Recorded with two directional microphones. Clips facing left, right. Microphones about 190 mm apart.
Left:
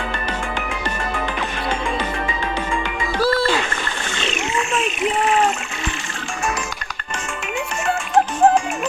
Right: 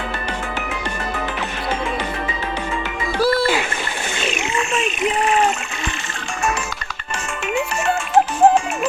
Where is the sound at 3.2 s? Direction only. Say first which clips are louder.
Right 1 dB; 10° right (ahead or behind).